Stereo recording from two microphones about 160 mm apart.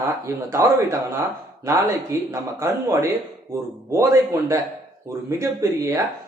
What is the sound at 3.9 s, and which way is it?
Speech, 20° right (ahead or behind).